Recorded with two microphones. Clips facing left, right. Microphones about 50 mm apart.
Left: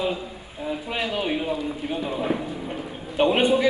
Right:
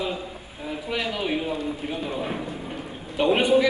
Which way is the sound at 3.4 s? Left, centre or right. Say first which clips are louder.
Right 3 dB; left.